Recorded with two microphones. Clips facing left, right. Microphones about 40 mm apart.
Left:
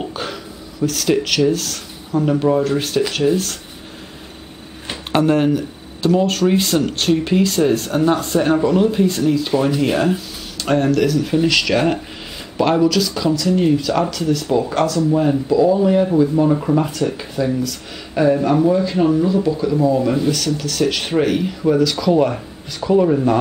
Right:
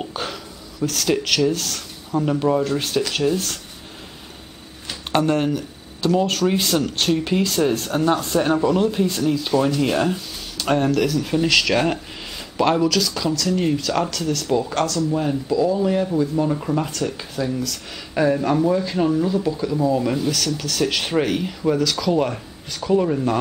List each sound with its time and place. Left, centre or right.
0.0 s a sound: centre
1.5 s speech: centre
5.1 s speech: centre